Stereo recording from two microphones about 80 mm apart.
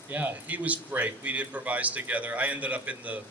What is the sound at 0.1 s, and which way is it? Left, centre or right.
Speech, right.